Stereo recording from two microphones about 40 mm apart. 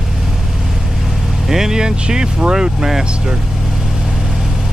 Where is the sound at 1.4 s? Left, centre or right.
Centre.